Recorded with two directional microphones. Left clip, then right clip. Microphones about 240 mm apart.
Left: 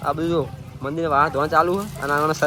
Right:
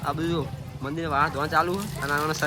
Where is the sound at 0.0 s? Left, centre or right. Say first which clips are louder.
Left 6 dB; centre.